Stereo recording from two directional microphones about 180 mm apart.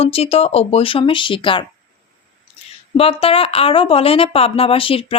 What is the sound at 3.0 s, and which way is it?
Speech, 30° left (ahead or behind).